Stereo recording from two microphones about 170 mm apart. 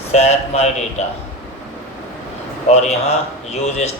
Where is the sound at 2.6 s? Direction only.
40° left (ahead or behind).